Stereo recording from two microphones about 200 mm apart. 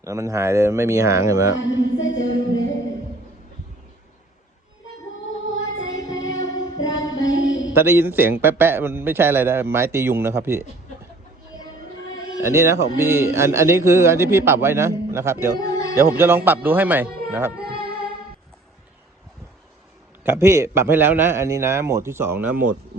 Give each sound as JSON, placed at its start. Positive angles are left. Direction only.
{"t": 0.0, "sound": "a man's voice", "side_deg": -15}
{"t": 1.5, "sound": "music", "side_deg": 70}
{"t": 5.3, "sound": "music", "side_deg": 75}
{"t": 7.3, "sound": "mantra", "side_deg": 75}
{"t": 7.8, "sound": "a man's voice", "side_deg": -10}
{"t": 12.4, "sound": "a man's voice", "side_deg": -15}
{"t": 15.5, "sound": "speech", "side_deg": 20}
{"t": 16.0, "sound": "a man's voice", "side_deg": -10}
{"t": 17.6, "sound": "music", "side_deg": -50}
{"t": 20.2, "sound": "a man's voice", "side_deg": -15}